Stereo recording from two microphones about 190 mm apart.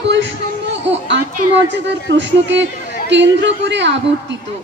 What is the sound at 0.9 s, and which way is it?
A woman's voice, 70° right (ahead or behind).